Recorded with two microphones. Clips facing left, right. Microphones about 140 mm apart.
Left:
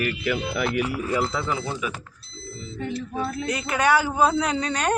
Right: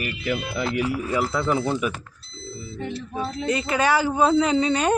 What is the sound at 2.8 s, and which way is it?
Speech, 20° right (ahead or behind).